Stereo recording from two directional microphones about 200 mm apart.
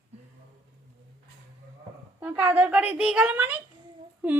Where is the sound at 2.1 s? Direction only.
10° right (ahead or behind).